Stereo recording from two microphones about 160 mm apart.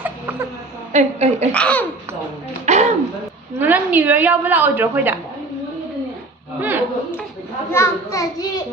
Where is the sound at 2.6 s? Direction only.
45° right (ahead or behind).